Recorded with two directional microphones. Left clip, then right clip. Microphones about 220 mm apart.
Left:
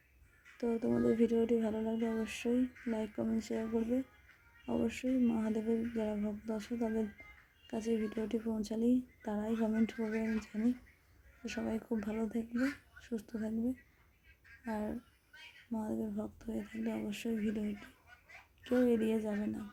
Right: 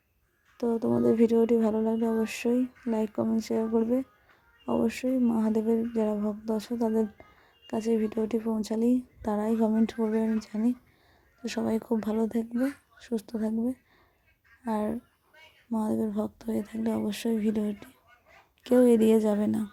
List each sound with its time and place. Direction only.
0.5 s speech: 15° right (ahead or behind)